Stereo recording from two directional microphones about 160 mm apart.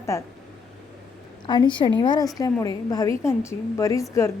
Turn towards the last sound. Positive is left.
turn(degrees=20)  # may be behind; listen again after turning